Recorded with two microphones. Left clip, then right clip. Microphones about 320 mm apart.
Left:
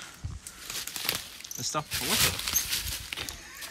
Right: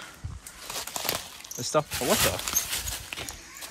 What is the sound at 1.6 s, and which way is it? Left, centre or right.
Speech, centre.